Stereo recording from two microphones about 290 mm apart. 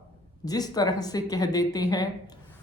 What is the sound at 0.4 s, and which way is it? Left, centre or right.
Speech, centre.